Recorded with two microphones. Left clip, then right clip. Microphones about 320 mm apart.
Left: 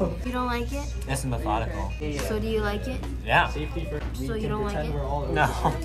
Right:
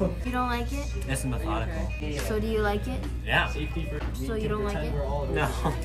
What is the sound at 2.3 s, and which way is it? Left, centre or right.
Speech, centre.